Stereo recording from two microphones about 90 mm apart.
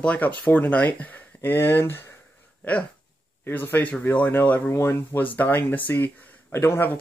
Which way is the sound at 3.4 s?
20° left (ahead or behind).